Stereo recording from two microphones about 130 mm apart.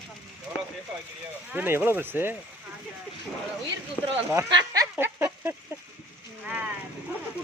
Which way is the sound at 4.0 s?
15° left (ahead or behind).